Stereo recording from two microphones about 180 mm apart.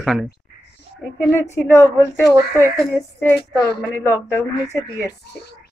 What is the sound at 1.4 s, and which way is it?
Speech, 15° left (ahead or behind).